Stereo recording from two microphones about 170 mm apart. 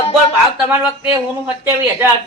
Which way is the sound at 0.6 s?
5° right (ahead or behind).